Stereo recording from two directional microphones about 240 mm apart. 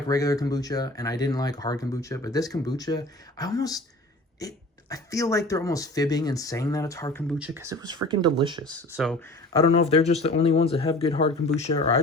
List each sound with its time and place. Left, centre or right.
0.1 s speech: centre
7.3 s speech: centre
8.9 s speech: centre
9.5 s speech: left